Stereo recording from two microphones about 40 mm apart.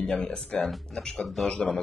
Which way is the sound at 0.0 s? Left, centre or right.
Left.